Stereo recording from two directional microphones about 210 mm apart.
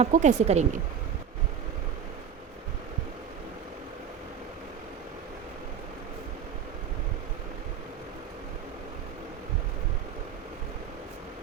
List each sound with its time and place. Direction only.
0.0 s a woman's voice: 35° right (ahead or behind)